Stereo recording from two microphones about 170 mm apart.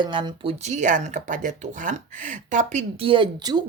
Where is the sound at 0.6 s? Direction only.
45° right (ahead or behind).